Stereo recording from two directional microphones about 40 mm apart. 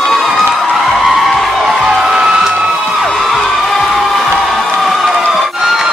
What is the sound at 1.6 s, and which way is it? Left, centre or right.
Music, centre.